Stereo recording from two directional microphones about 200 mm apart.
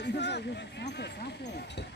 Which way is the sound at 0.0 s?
60° left (ahead or behind).